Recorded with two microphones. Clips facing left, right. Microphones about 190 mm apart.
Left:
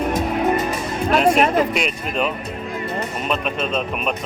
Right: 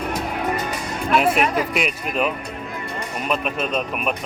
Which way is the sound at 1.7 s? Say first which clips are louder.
Left 1 dB; 5° right (ahead or behind).